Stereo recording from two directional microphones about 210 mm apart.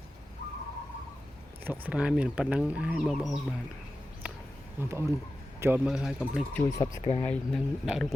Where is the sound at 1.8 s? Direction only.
5° right (ahead or behind).